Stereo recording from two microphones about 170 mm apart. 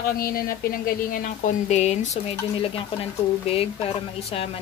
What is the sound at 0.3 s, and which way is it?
Speech, 60° left (ahead or behind).